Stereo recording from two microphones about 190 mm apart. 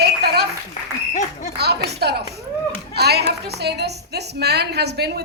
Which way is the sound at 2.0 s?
60° right (ahead or behind).